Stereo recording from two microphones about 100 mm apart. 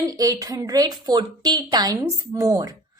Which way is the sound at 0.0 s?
35° right (ahead or behind).